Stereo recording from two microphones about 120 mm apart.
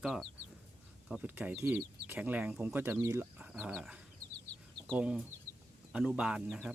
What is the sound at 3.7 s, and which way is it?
Speech, 5° right (ahead or behind).